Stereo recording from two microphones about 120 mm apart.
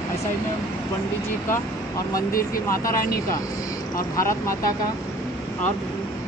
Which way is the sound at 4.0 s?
25° left (ahead or behind).